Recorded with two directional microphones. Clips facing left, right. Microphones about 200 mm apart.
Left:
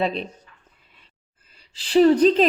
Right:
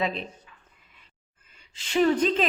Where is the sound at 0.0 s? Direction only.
30° left (ahead or behind).